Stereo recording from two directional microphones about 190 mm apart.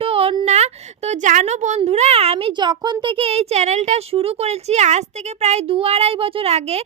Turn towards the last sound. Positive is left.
turn(degrees=-35)  # may be behind; listen again after turning